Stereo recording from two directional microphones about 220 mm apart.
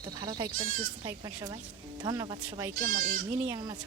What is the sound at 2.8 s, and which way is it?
Speech, 35° right (ahead or behind).